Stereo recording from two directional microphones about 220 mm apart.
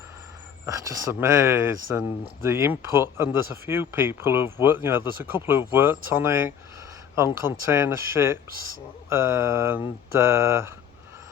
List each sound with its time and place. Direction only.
0.6 s speech: 10° right (ahead or behind)
7.7 s speech: 10° right (ahead or behind)
8.4 s speech: 40° right (ahead or behind)
9.0 s speech: 10° right (ahead or behind)